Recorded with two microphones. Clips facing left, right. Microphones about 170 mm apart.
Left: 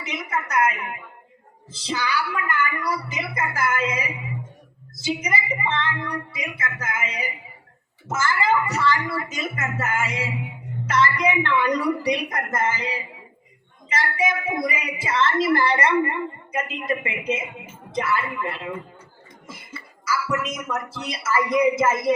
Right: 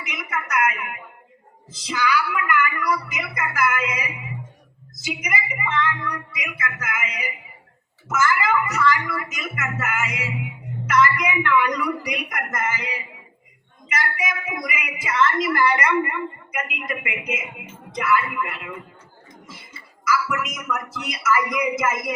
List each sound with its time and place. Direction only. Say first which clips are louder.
0.0 s a sound: left 2 dB; 30° left (ahead or behind)
1.7 s a woman's voice: right 3 dB; 30° left (ahead or behind)
20.1 s a woman's voice: right 1 dB; 30° left (ahead or behind)